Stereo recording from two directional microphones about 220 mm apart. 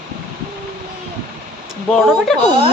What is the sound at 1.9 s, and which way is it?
Speech, centre (ahead or behind).